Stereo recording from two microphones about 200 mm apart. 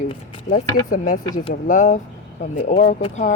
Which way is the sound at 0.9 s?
45° left (ahead or behind).